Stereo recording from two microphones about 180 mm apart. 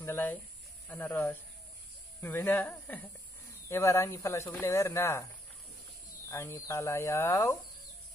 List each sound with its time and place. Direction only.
0.0 s speech: 10° left (ahead or behind)
6.2 s speech: 15° left (ahead or behind)